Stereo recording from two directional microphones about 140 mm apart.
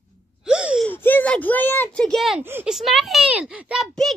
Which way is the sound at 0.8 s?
15° left (ahead or behind).